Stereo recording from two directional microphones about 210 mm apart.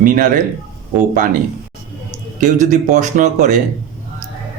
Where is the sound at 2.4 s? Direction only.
35° right (ahead or behind).